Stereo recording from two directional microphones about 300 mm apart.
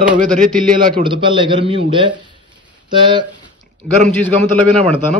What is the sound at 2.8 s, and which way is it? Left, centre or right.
Speech, centre.